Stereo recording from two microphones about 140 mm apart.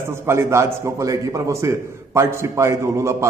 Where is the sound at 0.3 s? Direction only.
20° right (ahead or behind).